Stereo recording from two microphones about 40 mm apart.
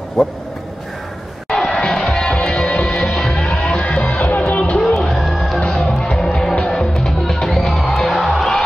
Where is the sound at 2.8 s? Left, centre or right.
Left.